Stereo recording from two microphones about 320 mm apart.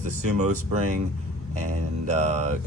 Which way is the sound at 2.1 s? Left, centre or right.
Right.